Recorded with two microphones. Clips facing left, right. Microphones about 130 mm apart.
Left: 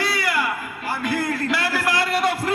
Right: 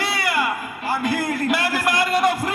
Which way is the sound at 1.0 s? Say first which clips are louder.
Even; 20° right (ahead or behind).